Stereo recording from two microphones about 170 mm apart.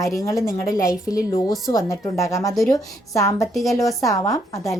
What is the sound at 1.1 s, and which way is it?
A woman's voice, 20° left (ahead or behind).